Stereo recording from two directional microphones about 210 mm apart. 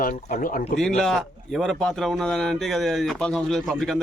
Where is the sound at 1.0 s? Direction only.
Centre (ahead or behind).